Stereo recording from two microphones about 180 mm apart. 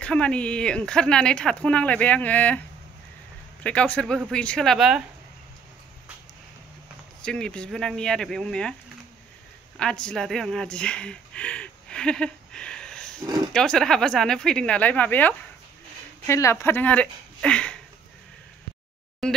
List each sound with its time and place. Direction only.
0.0 s speech: 5° left (ahead or behind)
3.6 s speech: 5° left (ahead or behind)
7.2 s speech: 5° left (ahead or behind)
9.8 s a woman's voice: 5° left (ahead or behind)
13.2 s speech: 20° right (ahead or behind)
13.5 s speech: 5° left (ahead or behind)
19.2 s speech: centre (ahead or behind)